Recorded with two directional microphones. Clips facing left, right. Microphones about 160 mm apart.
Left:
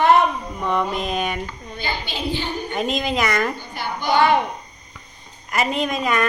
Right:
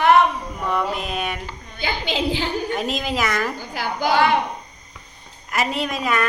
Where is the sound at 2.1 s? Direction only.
90° right.